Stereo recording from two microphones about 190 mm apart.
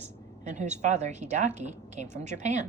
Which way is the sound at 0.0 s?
40° right (ahead or behind).